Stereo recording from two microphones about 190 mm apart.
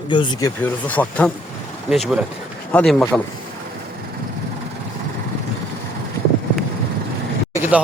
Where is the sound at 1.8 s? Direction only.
Centre (ahead or behind).